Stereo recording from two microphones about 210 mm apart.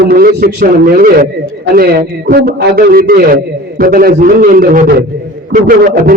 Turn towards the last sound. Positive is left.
turn(degrees=-45)  # may be behind; listen again after turning